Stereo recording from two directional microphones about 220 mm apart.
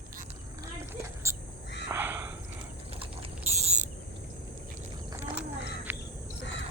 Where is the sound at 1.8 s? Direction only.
10° right (ahead or behind).